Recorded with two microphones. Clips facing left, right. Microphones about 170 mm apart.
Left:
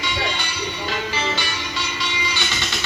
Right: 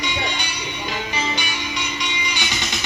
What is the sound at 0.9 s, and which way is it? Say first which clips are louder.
Music: even; 15° right (ahead or behind).